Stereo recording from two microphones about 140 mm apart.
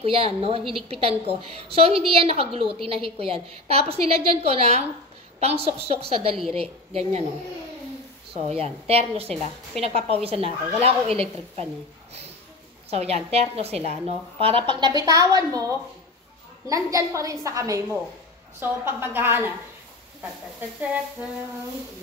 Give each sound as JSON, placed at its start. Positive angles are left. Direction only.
{"t": 0.0, "sound": "a woman's voice", "side_deg": -40}
{"t": 8.3, "sound": "a woman's voice", "side_deg": -45}
{"t": 12.9, "sound": "a woman's voice", "side_deg": -45}